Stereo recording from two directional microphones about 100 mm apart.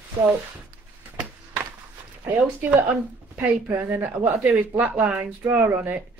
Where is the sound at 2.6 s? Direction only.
15° right (ahead or behind).